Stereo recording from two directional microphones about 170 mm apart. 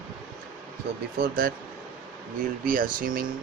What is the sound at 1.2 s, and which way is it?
Speech, 60° right (ahead or behind).